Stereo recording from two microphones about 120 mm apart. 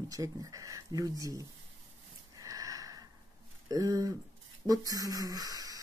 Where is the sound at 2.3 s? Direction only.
30° right (ahead or behind).